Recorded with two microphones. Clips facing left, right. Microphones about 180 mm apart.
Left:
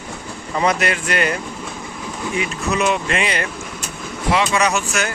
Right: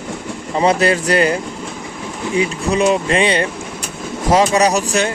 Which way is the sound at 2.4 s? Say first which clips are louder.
Right 5 dB; 30° right (ahead or behind).